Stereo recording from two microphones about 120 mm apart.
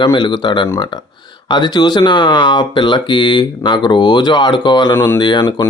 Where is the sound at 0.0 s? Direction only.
40° left (ahead or behind).